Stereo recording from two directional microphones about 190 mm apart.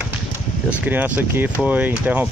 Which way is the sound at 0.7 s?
10° right (ahead or behind).